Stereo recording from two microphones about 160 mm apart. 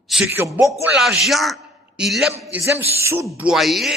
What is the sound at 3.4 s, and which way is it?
Speech, 5° right (ahead or behind).